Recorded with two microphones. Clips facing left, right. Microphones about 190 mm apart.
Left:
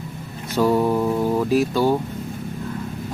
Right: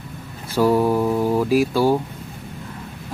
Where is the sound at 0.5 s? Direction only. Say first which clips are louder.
Right 1 dB; 5° right (ahead or behind).